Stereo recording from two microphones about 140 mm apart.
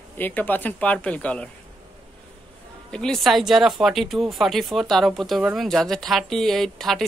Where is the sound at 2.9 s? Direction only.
5° left (ahead or behind).